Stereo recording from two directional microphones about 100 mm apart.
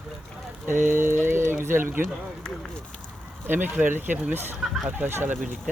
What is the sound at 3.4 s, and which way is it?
Speech, 20° right (ahead or behind).